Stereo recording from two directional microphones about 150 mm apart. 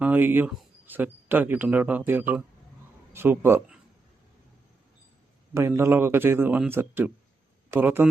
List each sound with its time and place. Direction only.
0.0 s speech: 15° right (ahead or behind)
5.5 s speech: 15° right (ahead or behind)